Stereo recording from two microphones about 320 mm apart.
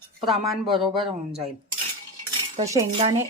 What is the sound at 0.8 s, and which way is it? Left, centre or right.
Speech, centre.